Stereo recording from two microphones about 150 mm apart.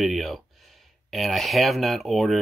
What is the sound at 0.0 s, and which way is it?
Speech, centre (ahead or behind).